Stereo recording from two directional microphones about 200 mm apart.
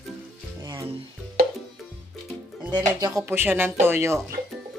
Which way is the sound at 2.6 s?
20° right (ahead or behind).